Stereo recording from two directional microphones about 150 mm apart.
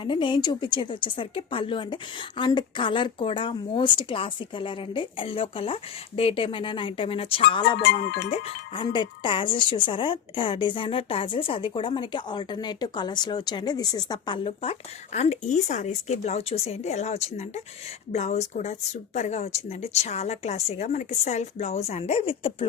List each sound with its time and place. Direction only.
0.0 s speech: 35° left (ahead or behind)
8.0 s speech: 90° left
8.3 s speech: 40° left (ahead or behind)